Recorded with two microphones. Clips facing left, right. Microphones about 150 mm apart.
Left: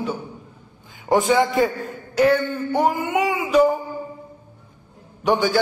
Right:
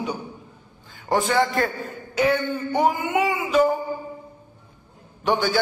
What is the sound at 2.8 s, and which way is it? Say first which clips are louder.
Child singing: left 1 dB; 10° right (ahead or behind).